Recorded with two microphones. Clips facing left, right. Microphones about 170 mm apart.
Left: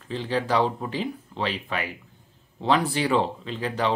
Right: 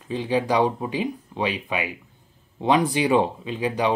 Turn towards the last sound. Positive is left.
turn(degrees=-15)  # may be behind; listen again after turning